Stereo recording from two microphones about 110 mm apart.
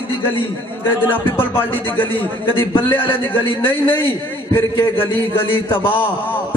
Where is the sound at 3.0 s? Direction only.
50° left (ahead or behind).